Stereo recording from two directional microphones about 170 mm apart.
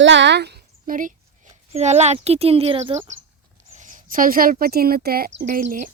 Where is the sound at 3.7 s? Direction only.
50° right (ahead or behind); by 5.4 s 75° right (ahead or behind).